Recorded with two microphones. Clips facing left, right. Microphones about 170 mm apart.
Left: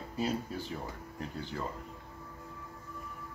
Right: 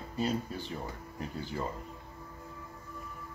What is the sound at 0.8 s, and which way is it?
Speech, 10° right (ahead or behind).